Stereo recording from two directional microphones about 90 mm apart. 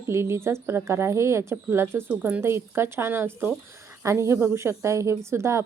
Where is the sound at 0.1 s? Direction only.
30° right (ahead or behind).